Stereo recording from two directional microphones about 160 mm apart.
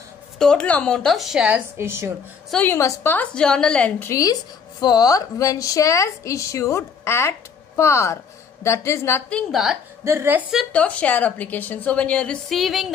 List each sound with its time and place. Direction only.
0.4 s speech: 5° left (ahead or behind); by 2.1 s 15° right (ahead or behind)
2.5 s a woman's voice: 15° left (ahead or behind)
4.1 s a woman's voice: 25° left (ahead or behind)
9.5 s speech: centre (ahead or behind)
10.0 s a woman's voice: 15° right (ahead or behind)
10.7 s a woman's voice: 10° left (ahead or behind)